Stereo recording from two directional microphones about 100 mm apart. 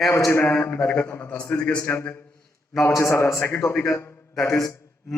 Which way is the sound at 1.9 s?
25° left (ahead or behind).